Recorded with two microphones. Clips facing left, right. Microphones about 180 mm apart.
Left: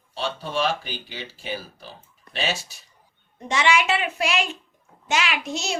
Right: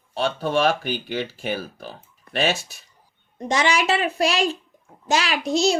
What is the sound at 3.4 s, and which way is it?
A child's voice, 40° right (ahead or behind).